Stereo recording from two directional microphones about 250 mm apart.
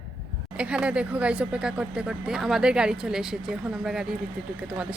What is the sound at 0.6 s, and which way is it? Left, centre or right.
Speech, centre.